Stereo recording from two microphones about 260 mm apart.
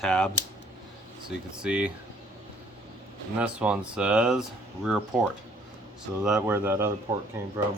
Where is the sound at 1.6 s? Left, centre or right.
Centre.